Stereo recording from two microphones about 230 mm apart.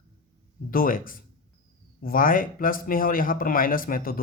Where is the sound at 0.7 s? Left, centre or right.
Left.